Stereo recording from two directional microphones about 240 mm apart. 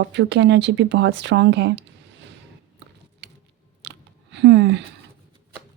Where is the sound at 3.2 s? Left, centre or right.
Right.